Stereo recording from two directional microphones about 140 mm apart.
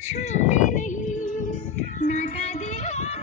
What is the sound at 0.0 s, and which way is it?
Music, 55° left (ahead or behind).